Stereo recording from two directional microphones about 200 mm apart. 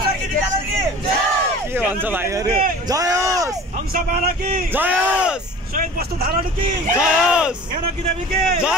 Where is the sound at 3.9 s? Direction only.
45° right (ahead or behind).